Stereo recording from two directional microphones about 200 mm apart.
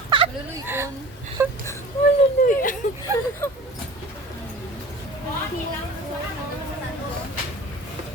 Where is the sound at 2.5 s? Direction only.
40° left (ahead or behind).